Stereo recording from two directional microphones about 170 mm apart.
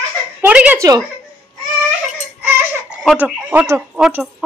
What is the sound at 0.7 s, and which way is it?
Speech, 20° right (ahead or behind).